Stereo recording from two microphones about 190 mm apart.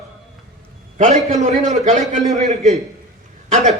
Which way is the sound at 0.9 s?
40° right (ahead or behind).